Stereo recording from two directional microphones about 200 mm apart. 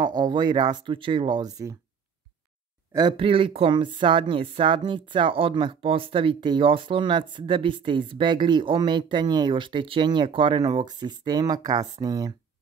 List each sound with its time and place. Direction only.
0.0 s speech: 20° right (ahead or behind)
2.9 s speech: 20° right (ahead or behind)